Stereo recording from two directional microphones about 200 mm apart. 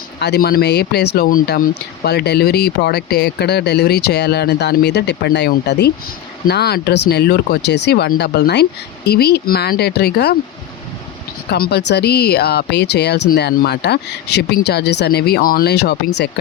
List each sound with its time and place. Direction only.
0.2 s speech: 55° left (ahead or behind)
11.7 s speech: 55° left (ahead or behind)